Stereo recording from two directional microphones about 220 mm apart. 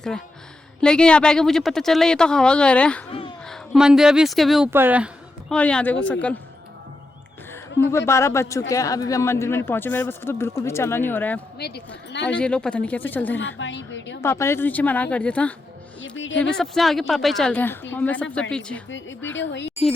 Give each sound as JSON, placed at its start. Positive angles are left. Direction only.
{"t": 0.8, "sound": "speech", "side_deg": 5}
{"t": 3.1, "sound": "a sound", "side_deg": 25}
{"t": 3.4, "sound": "speech", "side_deg": 0}
{"t": 5.5, "sound": "speech", "side_deg": 5}
{"t": 7.5, "sound": "a woman's voice", "side_deg": 10}
{"t": 11.5, "sound": "speech", "side_deg": 50}
{"t": 12.3, "sound": "speech", "side_deg": 5}
{"t": 13.6, "sound": "a woman's voice", "side_deg": 55}
{"t": 14.2, "sound": "speech", "side_deg": 10}
{"t": 16.0, "sound": "a woman's voice", "side_deg": 55}
{"t": 16.4, "sound": "speech", "side_deg": 5}
{"t": 18.9, "sound": "a woman's voice", "side_deg": 60}